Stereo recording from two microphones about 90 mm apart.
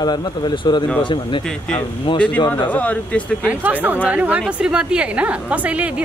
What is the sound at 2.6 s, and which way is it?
Speech, 15° left (ahead or behind).